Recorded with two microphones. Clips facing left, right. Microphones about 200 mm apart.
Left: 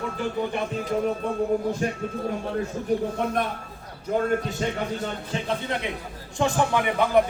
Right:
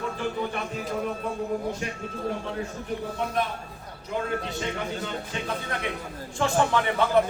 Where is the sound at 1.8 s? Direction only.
45° left (ahead or behind).